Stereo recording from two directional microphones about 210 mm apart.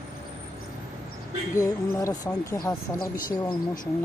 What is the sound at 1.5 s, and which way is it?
Speech, 15° left (ahead or behind).